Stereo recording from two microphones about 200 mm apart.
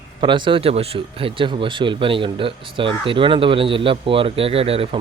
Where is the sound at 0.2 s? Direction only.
25° right (ahead or behind).